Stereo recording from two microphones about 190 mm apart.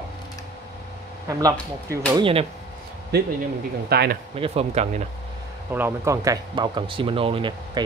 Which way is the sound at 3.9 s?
55° right (ahead or behind).